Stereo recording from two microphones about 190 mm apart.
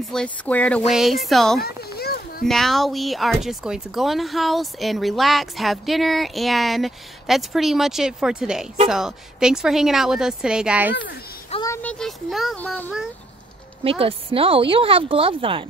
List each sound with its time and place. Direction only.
0.0 s speech: 5° left (ahead or behind)
1.8 s children playing: 55° left (ahead or behind)
2.4 s speech: centre (ahead or behind)
11.6 s speech: 10° left (ahead or behind)
13.8 s speech: 30° right (ahead or behind)